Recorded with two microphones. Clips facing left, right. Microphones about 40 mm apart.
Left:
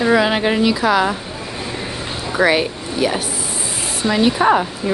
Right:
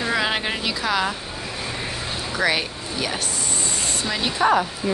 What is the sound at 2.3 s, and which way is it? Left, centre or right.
Speech, centre.